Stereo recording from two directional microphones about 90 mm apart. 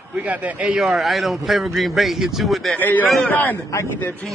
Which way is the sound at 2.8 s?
20° left (ahead or behind).